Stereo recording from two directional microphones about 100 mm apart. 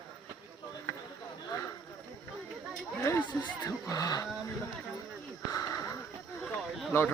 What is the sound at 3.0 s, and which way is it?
Chatter, 25° left (ahead or behind).